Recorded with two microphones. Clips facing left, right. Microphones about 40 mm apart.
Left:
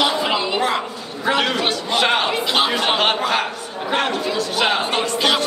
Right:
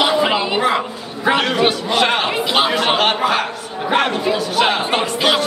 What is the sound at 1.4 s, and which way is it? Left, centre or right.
A man's voice, centre.